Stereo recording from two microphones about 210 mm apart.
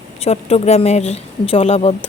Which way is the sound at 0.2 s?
30° left (ahead or behind).